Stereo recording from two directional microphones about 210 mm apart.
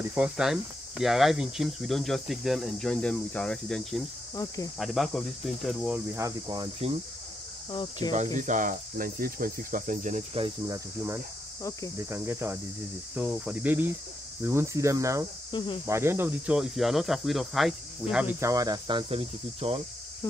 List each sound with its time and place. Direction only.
0.1 s speech: 5° right (ahead or behind)
6.1 s speech: 15° right (ahead or behind)
7.7 s cricket: 20° left (ahead or behind)
8.4 s cricket: 35° right (ahead or behind)
12.0 s speech: 10° right (ahead or behind)
15.5 s cricket: 25° left (ahead or behind)
15.9 s speech: 10° right (ahead or behind)